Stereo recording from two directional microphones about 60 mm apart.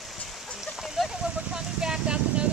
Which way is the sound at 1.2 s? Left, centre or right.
Centre.